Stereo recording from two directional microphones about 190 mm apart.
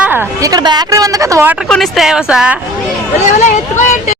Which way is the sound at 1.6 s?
Centre (ahead or behind).